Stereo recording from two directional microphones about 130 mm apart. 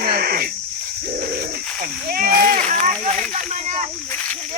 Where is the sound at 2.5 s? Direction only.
70° right (ahead or behind).